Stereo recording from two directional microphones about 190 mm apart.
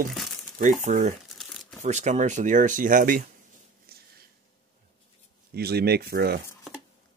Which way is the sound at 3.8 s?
55° right (ahead or behind).